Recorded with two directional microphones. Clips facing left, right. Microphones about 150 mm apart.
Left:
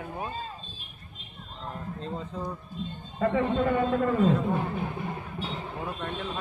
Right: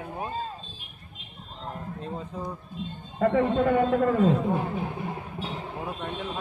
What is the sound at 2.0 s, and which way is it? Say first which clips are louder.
Speech: left 1 dB; 10° right (ahead or behind).